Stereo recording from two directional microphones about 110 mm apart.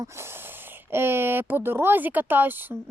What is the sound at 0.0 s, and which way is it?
Speech, 25° right (ahead or behind).